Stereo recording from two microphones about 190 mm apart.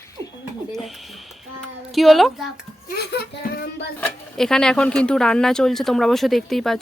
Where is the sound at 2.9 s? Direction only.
55° left (ahead or behind).